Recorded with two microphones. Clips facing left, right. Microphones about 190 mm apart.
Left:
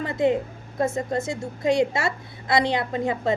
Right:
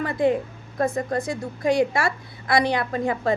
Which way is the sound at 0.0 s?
20° left (ahead or behind).